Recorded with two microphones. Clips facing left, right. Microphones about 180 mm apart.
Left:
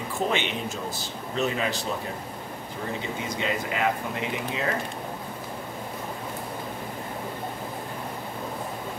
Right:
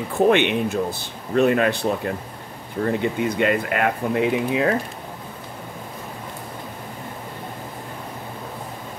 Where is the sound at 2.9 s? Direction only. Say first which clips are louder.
Right 10 dB; 60° right (ahead or behind).